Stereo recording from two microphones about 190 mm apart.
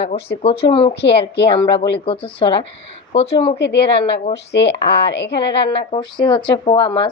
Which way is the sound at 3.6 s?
65° left (ahead or behind).